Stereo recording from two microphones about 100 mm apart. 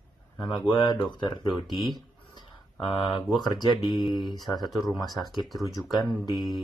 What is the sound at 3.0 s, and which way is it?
Speech, 55° left (ahead or behind).